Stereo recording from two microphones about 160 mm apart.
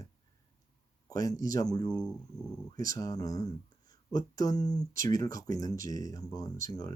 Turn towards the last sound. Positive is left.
turn(degrees=25)  # may be behind; listen again after turning